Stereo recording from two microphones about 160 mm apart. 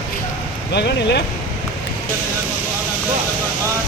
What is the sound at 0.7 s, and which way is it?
Speech, 90° left.